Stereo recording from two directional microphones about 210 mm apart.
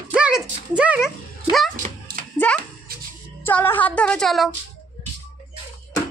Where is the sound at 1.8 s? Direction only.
40° right (ahead or behind).